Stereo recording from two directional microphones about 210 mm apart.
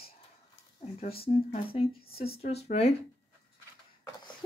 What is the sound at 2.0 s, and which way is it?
Speech, 45° left (ahead or behind).